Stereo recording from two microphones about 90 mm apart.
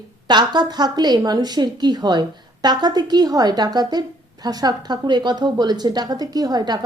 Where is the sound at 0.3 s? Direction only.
55° right (ahead or behind).